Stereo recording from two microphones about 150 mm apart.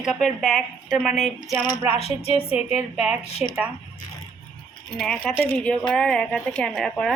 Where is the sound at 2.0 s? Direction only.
45° left (ahead or behind).